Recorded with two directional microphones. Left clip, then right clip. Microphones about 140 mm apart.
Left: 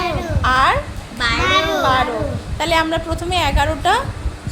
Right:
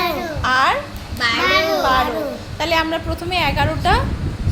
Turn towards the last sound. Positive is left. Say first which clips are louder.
# left 1 dB
turn(degrees=0)  # may be behind; listen again after turning